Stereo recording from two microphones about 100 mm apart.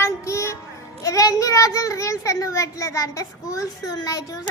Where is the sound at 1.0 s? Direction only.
35° left (ahead or behind).